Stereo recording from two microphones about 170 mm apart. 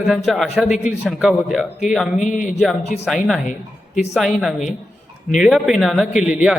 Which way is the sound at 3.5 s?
45° left (ahead or behind).